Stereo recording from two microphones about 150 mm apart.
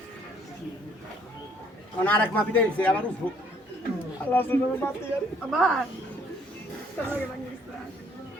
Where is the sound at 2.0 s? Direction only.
10° left (ahead or behind).